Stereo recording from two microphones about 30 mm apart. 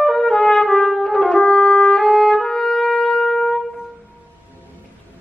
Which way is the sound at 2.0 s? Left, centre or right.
Centre.